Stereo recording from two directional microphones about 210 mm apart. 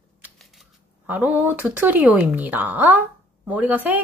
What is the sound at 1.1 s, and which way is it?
A child's voice, 10° right (ahead or behind).